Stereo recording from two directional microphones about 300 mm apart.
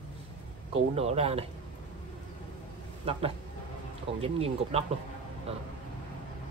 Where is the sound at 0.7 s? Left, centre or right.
Right.